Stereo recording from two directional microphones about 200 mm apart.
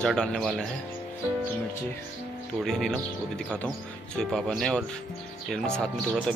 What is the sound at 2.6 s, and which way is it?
Speech, centre (ahead or behind).